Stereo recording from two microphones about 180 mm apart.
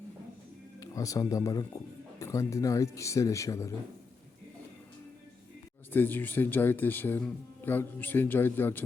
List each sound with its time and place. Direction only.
0.8 s speech: 20° left (ahead or behind)
5.9 s speech: 10° left (ahead or behind)